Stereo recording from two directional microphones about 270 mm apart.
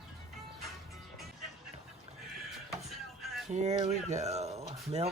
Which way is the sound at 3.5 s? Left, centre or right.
Right.